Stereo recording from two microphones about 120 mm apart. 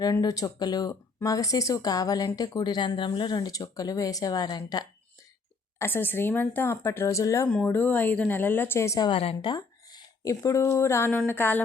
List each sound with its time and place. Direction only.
0.0 s speech: 30° left (ahead or behind)
5.8 s speech: 20° left (ahead or behind)
7.5 s a woman's voice: 10° left (ahead or behind)
9.0 s a woman's voice: 50° left (ahead or behind); by 11.6 s 15° left (ahead or behind)